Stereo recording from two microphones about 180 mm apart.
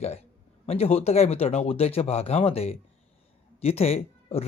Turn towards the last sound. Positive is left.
turn(degrees=35)  # may be behind; listen again after turning